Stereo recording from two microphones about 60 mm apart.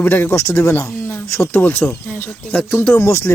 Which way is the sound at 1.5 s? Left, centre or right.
Left.